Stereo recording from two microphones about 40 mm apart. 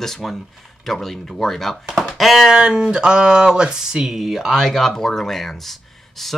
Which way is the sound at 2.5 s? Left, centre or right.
Centre.